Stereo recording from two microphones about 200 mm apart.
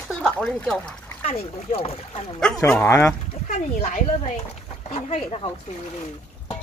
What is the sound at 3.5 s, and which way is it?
Speech, 35° left (ahead or behind).